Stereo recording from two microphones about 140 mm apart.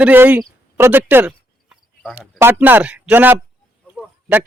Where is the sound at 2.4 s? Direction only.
15° right (ahead or behind).